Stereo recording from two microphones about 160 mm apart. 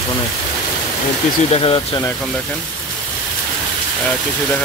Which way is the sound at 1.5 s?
35° left (ahead or behind).